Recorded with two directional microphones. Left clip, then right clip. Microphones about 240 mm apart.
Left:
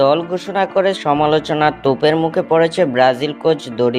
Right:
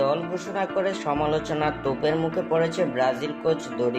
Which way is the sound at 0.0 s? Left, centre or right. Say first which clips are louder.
Left 10 dB; left.